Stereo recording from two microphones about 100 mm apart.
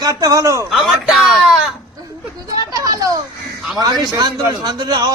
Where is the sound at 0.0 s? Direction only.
40° right (ahead or behind).